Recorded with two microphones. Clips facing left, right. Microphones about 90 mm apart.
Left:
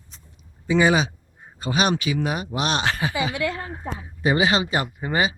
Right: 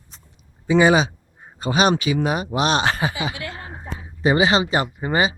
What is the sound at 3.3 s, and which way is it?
Speech, 60° left (ahead or behind).